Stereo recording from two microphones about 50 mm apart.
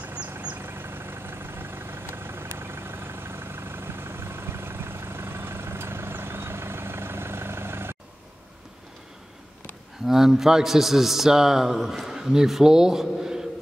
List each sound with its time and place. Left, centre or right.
0.0 s vehicle: right
0.6 s vehicle: right
10.0 s a man's voice: centre